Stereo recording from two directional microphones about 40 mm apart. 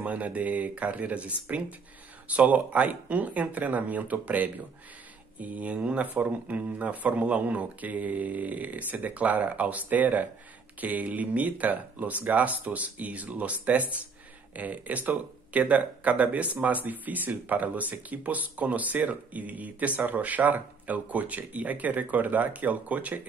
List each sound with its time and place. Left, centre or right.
0.0 s speech: right